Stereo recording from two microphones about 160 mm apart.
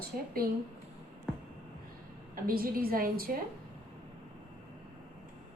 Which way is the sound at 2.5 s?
65° right (ahead or behind).